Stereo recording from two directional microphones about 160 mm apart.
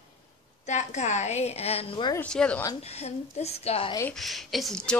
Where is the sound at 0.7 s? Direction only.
45° left (ahead or behind).